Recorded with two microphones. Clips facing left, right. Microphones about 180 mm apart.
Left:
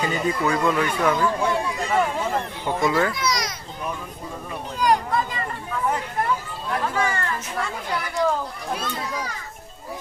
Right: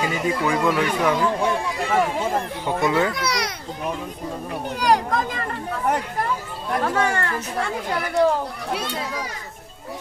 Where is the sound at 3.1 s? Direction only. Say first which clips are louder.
Right 1 dB; 65° right (ahead or behind).